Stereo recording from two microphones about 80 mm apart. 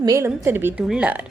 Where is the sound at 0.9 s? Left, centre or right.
Centre.